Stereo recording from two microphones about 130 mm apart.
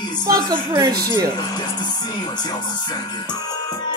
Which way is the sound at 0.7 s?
30° right (ahead or behind).